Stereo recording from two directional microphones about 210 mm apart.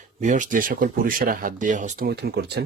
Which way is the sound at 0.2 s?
35° right (ahead or behind).